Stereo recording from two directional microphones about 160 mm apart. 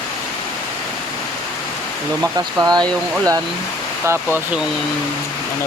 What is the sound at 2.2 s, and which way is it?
Speech, 20° right (ahead or behind).